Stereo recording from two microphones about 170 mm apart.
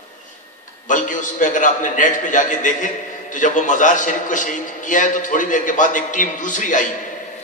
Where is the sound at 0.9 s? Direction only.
50° left (ahead or behind).